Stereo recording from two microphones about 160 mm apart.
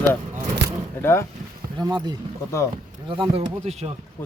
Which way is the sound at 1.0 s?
15° left (ahead or behind).